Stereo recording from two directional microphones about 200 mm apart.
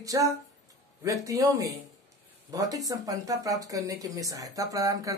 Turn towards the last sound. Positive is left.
turn(degrees=-15)  # may be behind; listen again after turning